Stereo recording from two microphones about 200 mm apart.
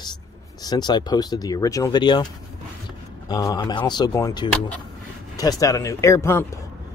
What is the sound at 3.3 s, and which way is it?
Speech, 20° left (ahead or behind).